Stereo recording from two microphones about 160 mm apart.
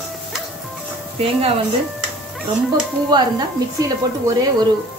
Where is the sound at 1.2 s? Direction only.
35° right (ahead or behind).